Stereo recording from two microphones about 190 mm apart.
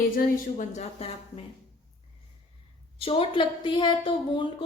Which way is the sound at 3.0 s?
30° left (ahead or behind).